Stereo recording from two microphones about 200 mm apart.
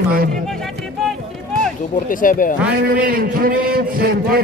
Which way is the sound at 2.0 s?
45° left (ahead or behind).